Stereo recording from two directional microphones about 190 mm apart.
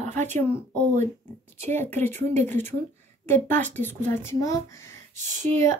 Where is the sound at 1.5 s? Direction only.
10° left (ahead or behind).